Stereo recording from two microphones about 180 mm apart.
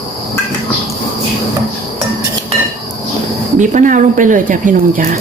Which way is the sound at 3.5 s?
45° right (ahead or behind).